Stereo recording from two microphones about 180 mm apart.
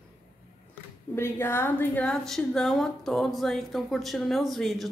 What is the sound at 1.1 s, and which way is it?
A woman's voice, 15° left (ahead or behind).